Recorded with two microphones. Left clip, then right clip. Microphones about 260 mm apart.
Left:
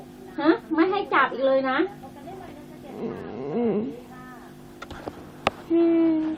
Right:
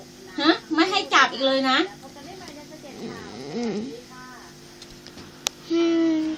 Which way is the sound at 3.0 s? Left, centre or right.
Centre.